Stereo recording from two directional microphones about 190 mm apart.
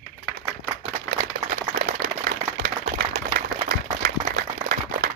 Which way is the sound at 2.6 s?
55° right (ahead or behind).